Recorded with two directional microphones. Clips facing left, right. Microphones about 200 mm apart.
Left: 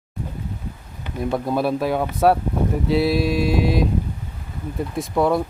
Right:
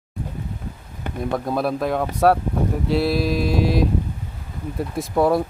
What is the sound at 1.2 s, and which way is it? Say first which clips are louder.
Speech: left 1 dB; centre (ahead or behind).